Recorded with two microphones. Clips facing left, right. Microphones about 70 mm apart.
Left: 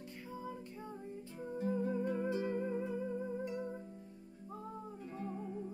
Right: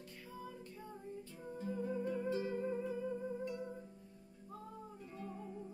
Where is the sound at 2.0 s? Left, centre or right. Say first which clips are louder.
Left 3 dB; left.